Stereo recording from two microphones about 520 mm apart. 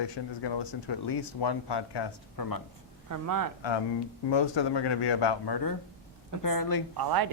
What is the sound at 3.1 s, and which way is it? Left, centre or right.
Speech, right.